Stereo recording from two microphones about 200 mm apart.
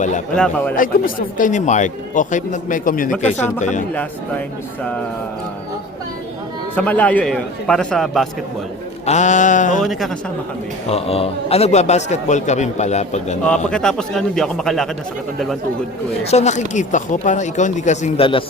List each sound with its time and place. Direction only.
0.3 s speech: 5° left (ahead or behind)
0.8 s a man's voice: 40° left (ahead or behind)
3.9 s speech: 5° left (ahead or behind)
6.7 s a man's voice: 10° left (ahead or behind)
9.0 s a man's voice: 35° left (ahead or behind)
9.8 s a man's voice: centre (ahead or behind)
10.8 s a man's voice: 30° left (ahead or behind)
13.7 s a man's voice: 5° left (ahead or behind)
16.2 s a man's voice: 35° left (ahead or behind)